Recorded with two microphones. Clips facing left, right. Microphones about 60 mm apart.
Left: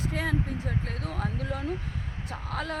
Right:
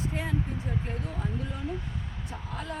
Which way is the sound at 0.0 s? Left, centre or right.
Left.